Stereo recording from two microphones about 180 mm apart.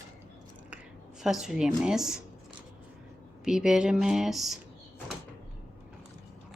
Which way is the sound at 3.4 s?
5° right (ahead or behind).